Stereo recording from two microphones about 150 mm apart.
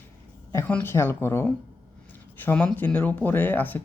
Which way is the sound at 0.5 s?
15° left (ahead or behind).